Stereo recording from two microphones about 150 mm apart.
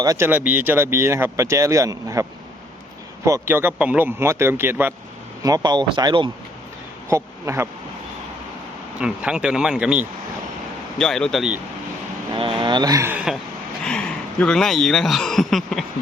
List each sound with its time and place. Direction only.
0.0 s speech: 25° right (ahead or behind)
0.3 s speech: 10° right (ahead or behind)
3.2 s speech: 20° right (ahead or behind)
7.1 s speech: 15° right (ahead or behind)
9.0 s speech: 5° right (ahead or behind)
10.9 s speech: 5° left (ahead or behind)
12.3 s speech: 35° right (ahead or behind)
13.1 s speech: 5° right (ahead or behind)